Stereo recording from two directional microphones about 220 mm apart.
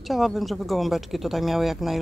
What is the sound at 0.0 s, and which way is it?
Speech, centre (ahead or behind).